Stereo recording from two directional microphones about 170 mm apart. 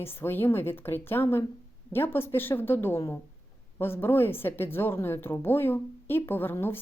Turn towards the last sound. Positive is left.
turn(degrees=15)  # may be behind; listen again after turning